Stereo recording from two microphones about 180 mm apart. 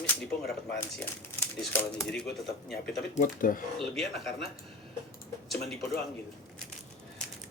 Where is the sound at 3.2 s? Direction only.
50° left (ahead or behind).